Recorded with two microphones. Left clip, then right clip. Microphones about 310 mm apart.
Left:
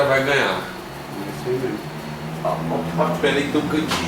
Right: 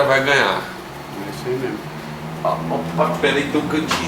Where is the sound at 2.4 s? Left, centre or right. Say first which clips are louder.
Right 2 dB; centre.